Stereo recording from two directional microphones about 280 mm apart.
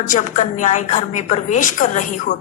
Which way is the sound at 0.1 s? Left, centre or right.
Left.